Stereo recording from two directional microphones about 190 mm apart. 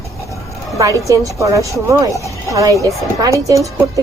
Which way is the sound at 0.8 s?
15° right (ahead or behind).